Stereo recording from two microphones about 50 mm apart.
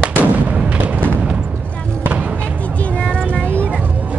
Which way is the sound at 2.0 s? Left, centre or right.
Right.